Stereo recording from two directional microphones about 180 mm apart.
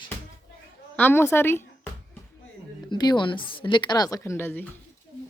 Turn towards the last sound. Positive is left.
turn(degrees=10)  # may be behind; listen again after turning